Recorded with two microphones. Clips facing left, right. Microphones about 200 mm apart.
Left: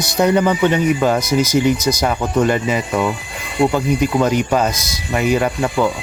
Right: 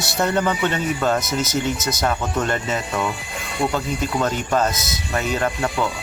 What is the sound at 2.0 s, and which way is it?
Speech, 10° left (ahead or behind).